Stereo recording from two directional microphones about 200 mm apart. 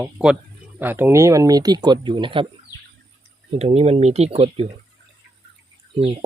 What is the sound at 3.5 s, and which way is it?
Speech, 30° right (ahead or behind).